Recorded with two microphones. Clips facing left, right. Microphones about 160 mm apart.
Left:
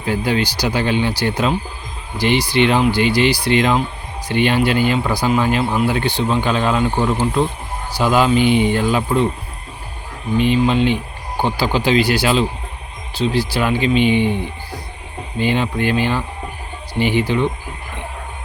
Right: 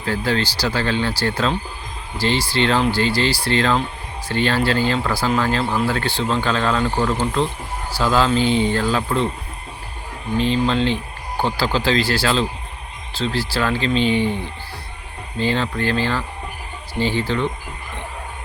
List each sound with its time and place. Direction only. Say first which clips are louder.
0.0 s speech: left 2 dB; 15° left (ahead or behind)
10.3 s speech: left 3 dB; 10° left (ahead or behind)